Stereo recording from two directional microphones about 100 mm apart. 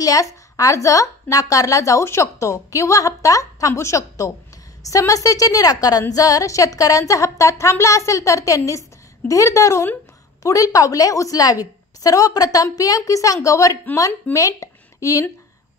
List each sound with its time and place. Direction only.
0.0 s a woman's voice: 35° left (ahead or behind)